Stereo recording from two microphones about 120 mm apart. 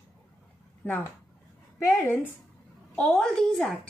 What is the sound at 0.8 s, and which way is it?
Speech, 15° left (ahead or behind).